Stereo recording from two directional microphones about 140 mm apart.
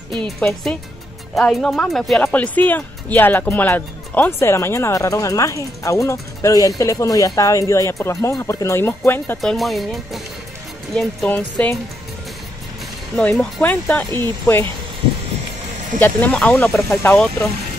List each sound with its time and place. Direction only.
0.1 s speech: 5° left (ahead or behind)
9.4 s speech: centre (ahead or behind)
13.1 s speech: 5° left (ahead or behind)
16.0 s speech: 10° left (ahead or behind)